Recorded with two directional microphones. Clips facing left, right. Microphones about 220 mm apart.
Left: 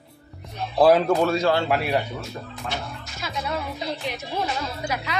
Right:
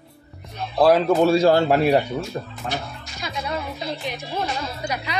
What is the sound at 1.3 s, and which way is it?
Speech, 35° right (ahead or behind).